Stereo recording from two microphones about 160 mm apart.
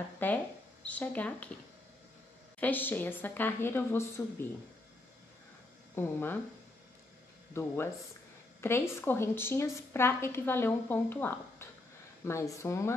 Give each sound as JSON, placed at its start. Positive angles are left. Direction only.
{"t": 0.2, "sound": "a woman's voice", "side_deg": 10}
{"t": 2.6, "sound": "a woman's voice", "side_deg": 10}
{"t": 5.9, "sound": "a woman's voice", "side_deg": 15}
{"t": 7.5, "sound": "a woman's voice", "side_deg": 15}